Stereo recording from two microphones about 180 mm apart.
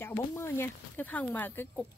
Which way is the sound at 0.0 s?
15° left (ahead or behind).